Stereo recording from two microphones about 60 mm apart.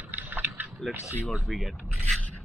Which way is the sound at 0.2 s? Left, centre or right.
Right.